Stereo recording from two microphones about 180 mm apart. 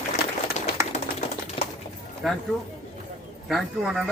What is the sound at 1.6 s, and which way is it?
Bird, 30° left (ahead or behind).